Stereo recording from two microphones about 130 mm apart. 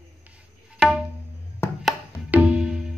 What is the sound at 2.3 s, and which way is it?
Tabla, 10° right (ahead or behind).